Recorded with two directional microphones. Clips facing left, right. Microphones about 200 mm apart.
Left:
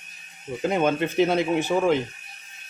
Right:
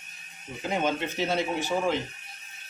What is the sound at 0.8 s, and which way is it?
Speech, 55° left (ahead or behind).